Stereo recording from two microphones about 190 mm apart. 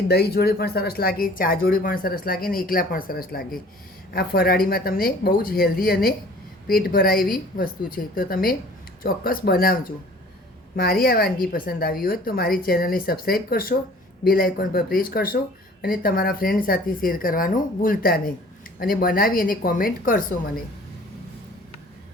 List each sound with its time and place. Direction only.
0.1 s speech: 55° left (ahead or behind)